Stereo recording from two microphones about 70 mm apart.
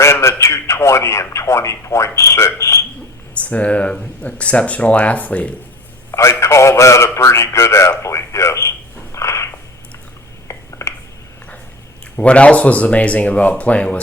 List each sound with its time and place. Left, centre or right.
0.0 s speech: left
3.3 s speech: centre
6.1 s a man's voice: left
9.1 s cat: left
10.5 s a sound: left
12.1 s speech: centre